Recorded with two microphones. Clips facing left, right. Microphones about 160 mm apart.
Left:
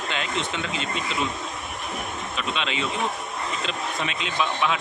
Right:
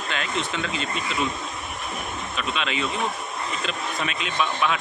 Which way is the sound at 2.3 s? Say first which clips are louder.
Right 1 dB; 25° left (ahead or behind).